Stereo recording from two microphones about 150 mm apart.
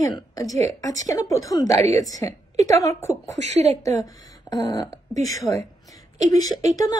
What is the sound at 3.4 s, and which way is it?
Speech, 50° right (ahead or behind).